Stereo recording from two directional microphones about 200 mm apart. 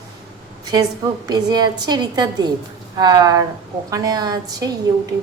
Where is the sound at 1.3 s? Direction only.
20° right (ahead or behind).